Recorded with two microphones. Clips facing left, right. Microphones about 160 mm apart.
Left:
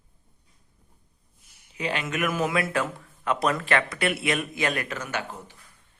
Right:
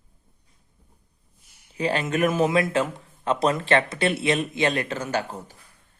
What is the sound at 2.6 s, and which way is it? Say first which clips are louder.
Speech: right 3 dB; 20° right (ahead or behind).